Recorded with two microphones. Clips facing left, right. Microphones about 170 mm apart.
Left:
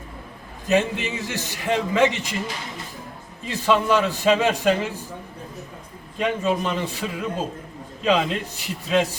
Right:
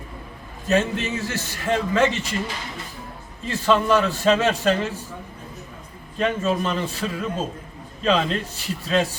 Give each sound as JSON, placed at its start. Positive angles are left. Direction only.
{"t": 0.7, "sound": "a man's voice", "side_deg": 15}
{"t": 3.4, "sound": "a man's voice", "side_deg": 15}
{"t": 6.1, "sound": "a man's voice", "side_deg": 15}